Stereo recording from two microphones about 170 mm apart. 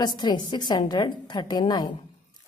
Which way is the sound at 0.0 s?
25° left (ahead or behind).